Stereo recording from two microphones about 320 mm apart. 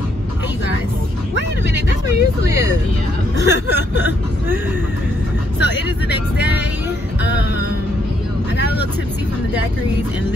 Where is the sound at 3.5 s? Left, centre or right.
Left.